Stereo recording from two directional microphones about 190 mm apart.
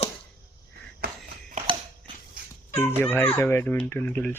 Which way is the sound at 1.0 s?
45° right (ahead or behind).